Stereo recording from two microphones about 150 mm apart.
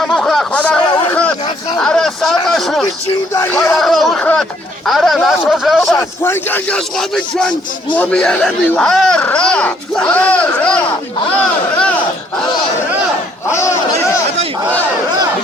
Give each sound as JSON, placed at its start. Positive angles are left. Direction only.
{"t": 0.0, "sound": "a sound", "side_deg": 0}
{"t": 1.8, "sound": "a sound", "side_deg": 5}
{"t": 3.3, "sound": "speech", "side_deg": 15}
{"t": 3.8, "sound": "speech", "side_deg": 0}
{"t": 5.9, "sound": "speech", "side_deg": 15}
{"t": 7.9, "sound": "speech", "side_deg": 5}
{"t": 13.5, "sound": "crowd", "side_deg": 20}